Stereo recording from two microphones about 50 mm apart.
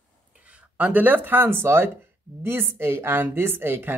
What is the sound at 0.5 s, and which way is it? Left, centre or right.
A woman's voice, right.